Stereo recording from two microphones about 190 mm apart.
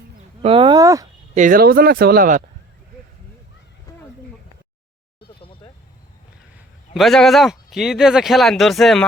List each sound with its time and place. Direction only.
0.4 s speech: 30° right (ahead or behind)
1.4 s speech: 50° right (ahead or behind)
3.9 s a sound: 15° left (ahead or behind)
6.9 s speech: centre (ahead or behind)